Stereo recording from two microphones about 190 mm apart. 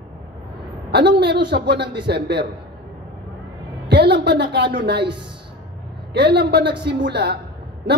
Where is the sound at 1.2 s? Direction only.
65° right (ahead or behind).